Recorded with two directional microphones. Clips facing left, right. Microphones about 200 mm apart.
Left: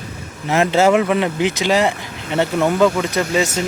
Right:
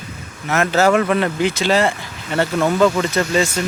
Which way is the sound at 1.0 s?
10° left (ahead or behind).